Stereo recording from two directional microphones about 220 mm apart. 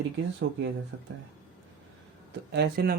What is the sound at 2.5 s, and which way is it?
Speech, 50° right (ahead or behind).